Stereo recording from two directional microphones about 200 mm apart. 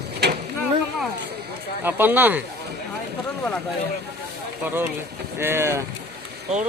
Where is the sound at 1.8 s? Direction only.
10° right (ahead or behind).